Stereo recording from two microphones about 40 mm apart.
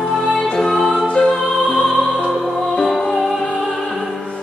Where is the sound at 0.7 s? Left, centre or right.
Centre.